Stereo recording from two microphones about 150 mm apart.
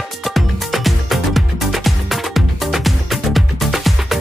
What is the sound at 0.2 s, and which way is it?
Music, centre (ahead or behind).